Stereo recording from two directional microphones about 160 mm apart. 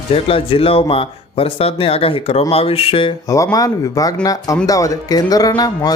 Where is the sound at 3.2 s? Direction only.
20° left (ahead or behind).